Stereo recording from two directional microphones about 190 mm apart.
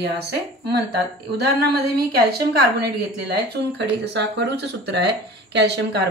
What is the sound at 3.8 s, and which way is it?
A woman's voice, 70° right (ahead or behind).